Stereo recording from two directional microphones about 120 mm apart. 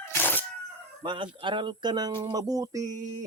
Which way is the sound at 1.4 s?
40° right (ahead or behind).